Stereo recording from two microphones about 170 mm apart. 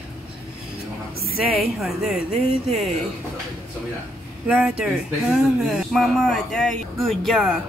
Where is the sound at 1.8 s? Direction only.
Centre (ahead or behind).